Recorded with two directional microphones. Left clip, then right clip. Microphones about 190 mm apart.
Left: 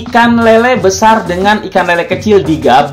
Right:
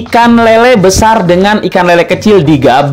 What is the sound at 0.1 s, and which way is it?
Speech, 45° right (ahead or behind).